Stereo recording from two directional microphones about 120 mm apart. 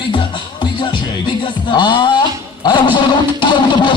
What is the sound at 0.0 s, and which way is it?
Music, 40° left (ahead or behind).